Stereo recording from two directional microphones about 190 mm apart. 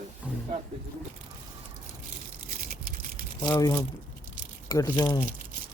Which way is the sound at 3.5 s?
15° left (ahead or behind).